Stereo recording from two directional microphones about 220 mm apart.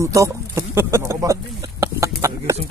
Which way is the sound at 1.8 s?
15° right (ahead or behind).